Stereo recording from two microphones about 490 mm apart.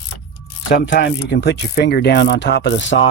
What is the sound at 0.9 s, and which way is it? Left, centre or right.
Speech, left.